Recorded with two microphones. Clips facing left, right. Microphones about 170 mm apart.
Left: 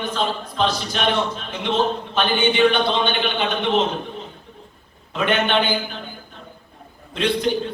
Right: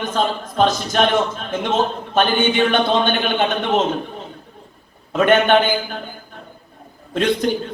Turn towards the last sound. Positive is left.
turn(degrees=-45)  # may be behind; listen again after turning